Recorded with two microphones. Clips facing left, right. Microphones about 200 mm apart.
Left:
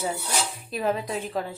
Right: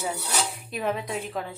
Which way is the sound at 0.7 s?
Centre (ahead or behind).